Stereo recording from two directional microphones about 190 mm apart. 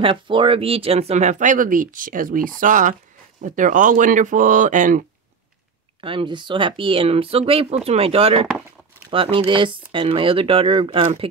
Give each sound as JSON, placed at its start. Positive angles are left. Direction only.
{"t": 0.0, "sound": "speech", "side_deg": -25}
{"t": 5.9, "sound": "speech", "side_deg": -25}